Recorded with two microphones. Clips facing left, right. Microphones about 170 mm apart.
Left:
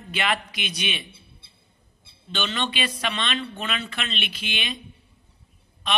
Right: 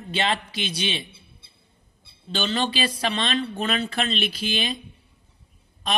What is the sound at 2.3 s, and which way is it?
A woman's voice, 35° right (ahead or behind).